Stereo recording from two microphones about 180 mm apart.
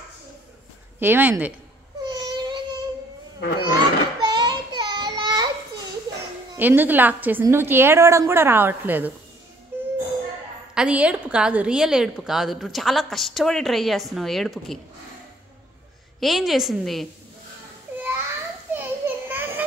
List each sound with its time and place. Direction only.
0.9 s a woman's voice: 10° right (ahead or behind)
2.0 s a sound: 25° right (ahead or behind)
6.5 s a woman's voice: 10° right (ahead or behind)
9.7 s music: 10° right (ahead or behind)
10.7 s a woman's voice: 5° right (ahead or behind)
16.2 s a woman's voice: centre (ahead or behind)
18.7 s children playing: 10° right (ahead or behind)